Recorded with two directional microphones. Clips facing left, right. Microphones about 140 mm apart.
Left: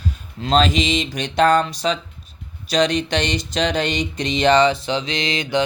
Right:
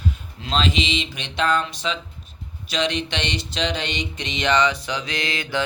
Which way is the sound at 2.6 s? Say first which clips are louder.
Left 6 dB; 40° left (ahead or behind).